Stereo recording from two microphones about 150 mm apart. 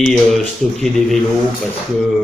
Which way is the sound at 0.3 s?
Centre (ahead or behind).